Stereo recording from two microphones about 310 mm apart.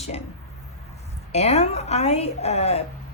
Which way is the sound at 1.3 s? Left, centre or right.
Left.